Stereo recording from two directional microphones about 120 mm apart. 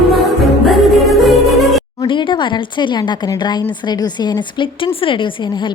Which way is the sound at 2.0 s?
40° left (ahead or behind).